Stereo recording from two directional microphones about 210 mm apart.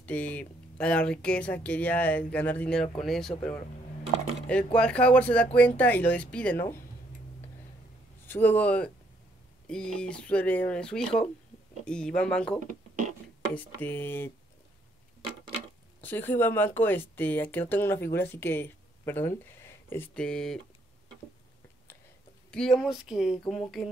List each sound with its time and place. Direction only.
0.0 s speech: 5° left (ahead or behind)
4.7 s speech: 5° left (ahead or behind)
8.3 s speech: 10° left (ahead or behind)
12.6 s a sound: 35° right (ahead or behind)
13.6 s speech: 10° left (ahead or behind)
16.0 s speech: 10° left (ahead or behind)
22.5 s speech: centre (ahead or behind)